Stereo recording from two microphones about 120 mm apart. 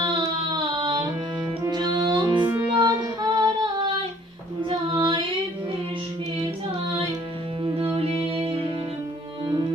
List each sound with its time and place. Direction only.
0.0 s a sound: 40° right (ahead or behind)
1.6 s music: 35° right (ahead or behind)
4.7 s female singing: 40° right (ahead or behind)
7.6 s music: 45° right (ahead or behind)